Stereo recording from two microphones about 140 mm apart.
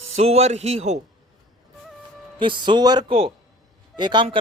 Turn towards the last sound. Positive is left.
turn(degrees=-30)  # may be behind; listen again after turning